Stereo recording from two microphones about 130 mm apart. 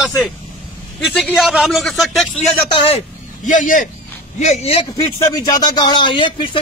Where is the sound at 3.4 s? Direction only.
80° left.